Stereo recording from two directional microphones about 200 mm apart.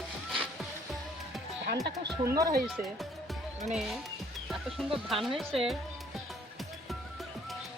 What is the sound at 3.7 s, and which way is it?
Speech, centre (ahead or behind).